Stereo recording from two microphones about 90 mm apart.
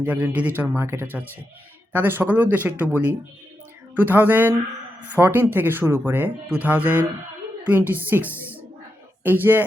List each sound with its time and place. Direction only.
0.0 s speech: 20° right (ahead or behind)